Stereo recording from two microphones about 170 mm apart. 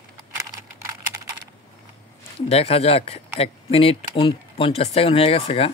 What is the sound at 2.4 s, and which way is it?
Speech, 35° left (ahead or behind).